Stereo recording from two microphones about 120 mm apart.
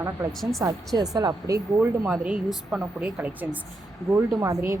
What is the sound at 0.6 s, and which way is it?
Speech, 20° right (ahead or behind).